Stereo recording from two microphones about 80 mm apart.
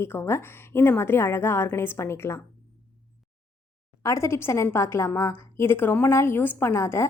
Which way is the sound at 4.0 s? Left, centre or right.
Left.